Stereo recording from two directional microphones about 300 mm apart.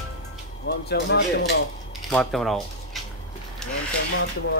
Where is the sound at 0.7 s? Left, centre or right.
Left.